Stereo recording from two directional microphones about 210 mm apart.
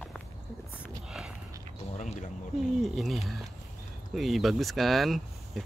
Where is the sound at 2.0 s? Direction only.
35° left (ahead or behind).